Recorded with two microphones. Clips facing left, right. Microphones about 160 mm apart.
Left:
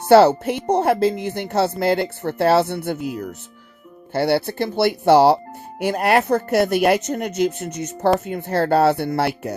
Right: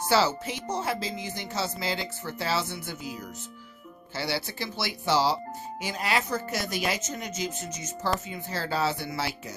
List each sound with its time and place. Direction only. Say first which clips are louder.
0.1 s speech: left 13 dB; 60° left (ahead or behind)